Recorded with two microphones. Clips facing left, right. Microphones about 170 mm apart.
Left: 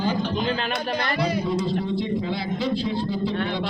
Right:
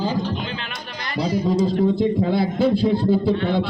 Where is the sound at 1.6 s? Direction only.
50° right (ahead or behind).